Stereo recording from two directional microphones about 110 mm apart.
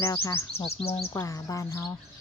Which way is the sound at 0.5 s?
65° left (ahead or behind).